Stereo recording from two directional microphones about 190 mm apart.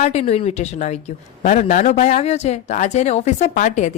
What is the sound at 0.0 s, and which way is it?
Speech, 35° left (ahead or behind).